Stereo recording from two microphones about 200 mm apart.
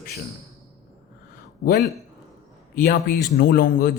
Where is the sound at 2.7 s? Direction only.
45° left (ahead or behind).